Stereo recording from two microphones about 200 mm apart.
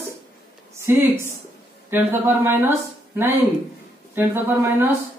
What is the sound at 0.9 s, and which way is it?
Speech, 10° right (ahead or behind).